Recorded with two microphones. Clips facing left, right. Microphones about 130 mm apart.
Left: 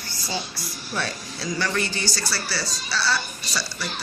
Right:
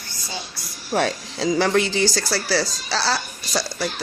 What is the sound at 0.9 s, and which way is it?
Speech, 90° right.